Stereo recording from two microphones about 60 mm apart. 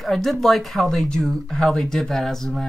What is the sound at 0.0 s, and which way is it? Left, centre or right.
Speech, centre.